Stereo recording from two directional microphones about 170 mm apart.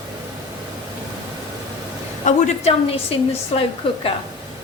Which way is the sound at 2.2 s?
40° left (ahead or behind).